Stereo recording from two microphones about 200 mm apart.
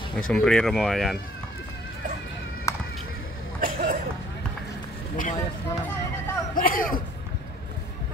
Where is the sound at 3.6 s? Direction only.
45° right (ahead or behind).